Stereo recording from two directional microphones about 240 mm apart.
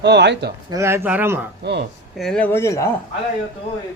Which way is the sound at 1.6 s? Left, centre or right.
Right.